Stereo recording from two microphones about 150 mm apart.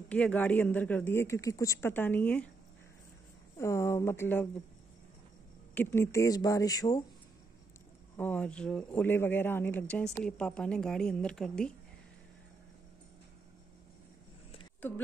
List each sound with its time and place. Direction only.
0.1 s speech: 10° left (ahead or behind)
3.5 s speech: 20° left (ahead or behind)
5.8 s speech: 15° left (ahead or behind)
8.2 s a woman's voice: 10° left (ahead or behind)